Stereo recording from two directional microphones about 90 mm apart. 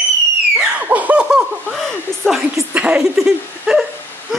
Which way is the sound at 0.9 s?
15° right (ahead or behind).